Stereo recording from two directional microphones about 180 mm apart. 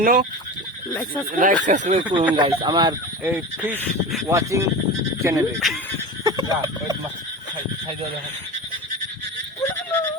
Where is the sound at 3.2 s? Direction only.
10° right (ahead or behind).